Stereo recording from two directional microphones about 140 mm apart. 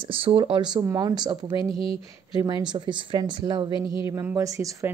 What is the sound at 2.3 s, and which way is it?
A woman's voice, 30° right (ahead or behind).